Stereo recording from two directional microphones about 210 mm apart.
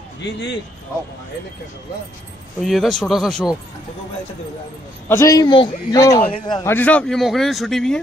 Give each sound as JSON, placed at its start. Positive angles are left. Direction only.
{"t": 0.2, "sound": "a man's voice", "side_deg": 55}
{"t": 2.6, "sound": "speech", "side_deg": 0}
{"t": 5.0, "sound": "a man's voice", "side_deg": 15}
{"t": 6.7, "sound": "speech", "side_deg": 5}